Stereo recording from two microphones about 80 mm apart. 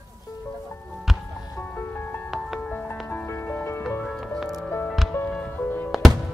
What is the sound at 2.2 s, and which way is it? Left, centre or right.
Music, centre.